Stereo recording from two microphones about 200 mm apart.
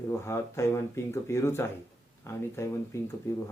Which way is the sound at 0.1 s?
15° left (ahead or behind).